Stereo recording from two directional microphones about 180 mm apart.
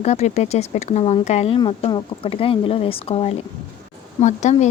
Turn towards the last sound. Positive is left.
turn(degrees=40)  # may be behind; listen again after turning